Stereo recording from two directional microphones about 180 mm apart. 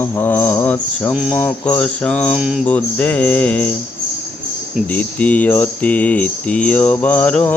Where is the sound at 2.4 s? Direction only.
5° right (ahead or behind).